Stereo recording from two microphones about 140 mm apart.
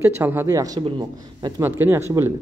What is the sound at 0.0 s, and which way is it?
A man's voice, 15° right (ahead or behind).